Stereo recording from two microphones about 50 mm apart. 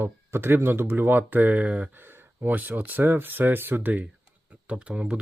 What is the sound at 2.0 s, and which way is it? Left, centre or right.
Speech, right.